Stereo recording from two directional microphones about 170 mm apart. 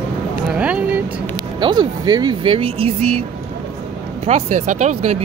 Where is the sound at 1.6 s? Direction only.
25° right (ahead or behind).